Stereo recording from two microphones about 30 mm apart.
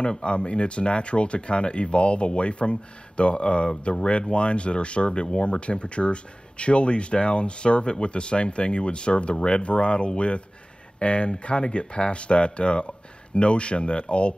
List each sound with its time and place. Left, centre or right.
0.0 s speech: left